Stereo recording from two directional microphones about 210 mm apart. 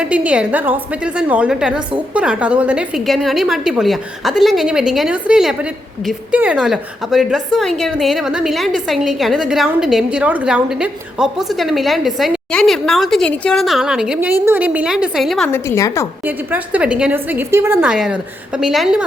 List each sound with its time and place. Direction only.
0.0 s a woman's voice: 5° right (ahead or behind)
15.5 s a woman's voice: 15° left (ahead or behind)
16.2 s a woman's voice: 10° right (ahead or behind)